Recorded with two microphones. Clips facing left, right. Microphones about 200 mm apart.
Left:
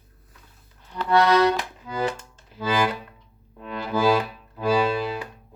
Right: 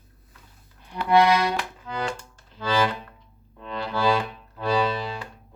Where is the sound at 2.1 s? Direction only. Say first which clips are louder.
Left 3 dB; 20° left (ahead or behind).